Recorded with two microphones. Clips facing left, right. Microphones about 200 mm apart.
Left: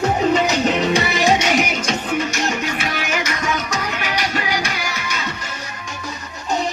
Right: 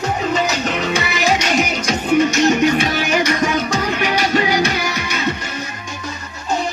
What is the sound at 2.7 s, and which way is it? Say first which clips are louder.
Music: right 7 dB; 35° right (ahead or behind).